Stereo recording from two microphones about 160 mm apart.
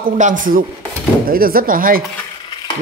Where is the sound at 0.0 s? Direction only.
55° right (ahead or behind).